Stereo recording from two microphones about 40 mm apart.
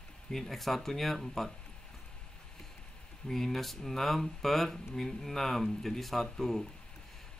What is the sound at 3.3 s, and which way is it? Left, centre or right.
Speech, centre.